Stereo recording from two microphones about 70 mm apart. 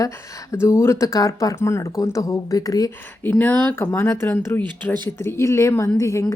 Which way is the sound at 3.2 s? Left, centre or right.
Left.